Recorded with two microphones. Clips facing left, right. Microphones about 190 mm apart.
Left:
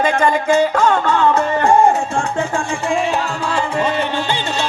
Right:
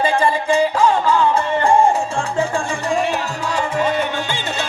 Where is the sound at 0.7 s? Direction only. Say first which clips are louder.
Even; 60° left (ahead or behind).